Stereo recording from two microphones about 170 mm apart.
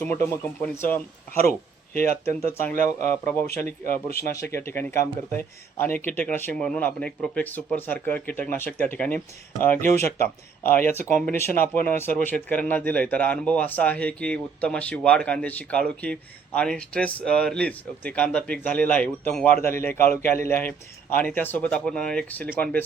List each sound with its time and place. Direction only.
0.6 s speech: 10° left (ahead or behind)
1.5 s speech: 60° left (ahead or behind)
2.2 s speech: 10° left (ahead or behind)